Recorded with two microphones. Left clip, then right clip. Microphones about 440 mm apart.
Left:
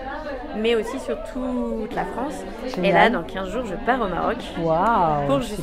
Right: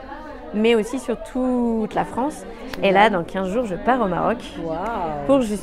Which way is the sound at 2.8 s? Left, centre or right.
Right.